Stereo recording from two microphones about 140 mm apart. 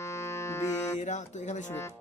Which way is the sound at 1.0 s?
60° left (ahead or behind).